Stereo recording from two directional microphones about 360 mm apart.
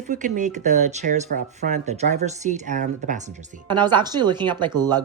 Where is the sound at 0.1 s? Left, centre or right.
Right.